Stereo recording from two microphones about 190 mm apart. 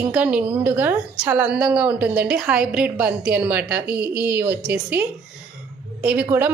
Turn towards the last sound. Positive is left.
turn(degrees=-10)  # may be behind; listen again after turning